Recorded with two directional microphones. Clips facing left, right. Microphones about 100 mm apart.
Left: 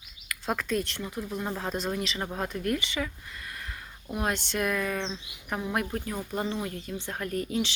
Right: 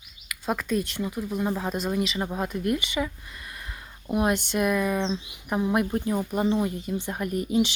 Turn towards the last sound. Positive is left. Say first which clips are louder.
# right 5 dB
turn(degrees=-15)  # may be behind; listen again after turning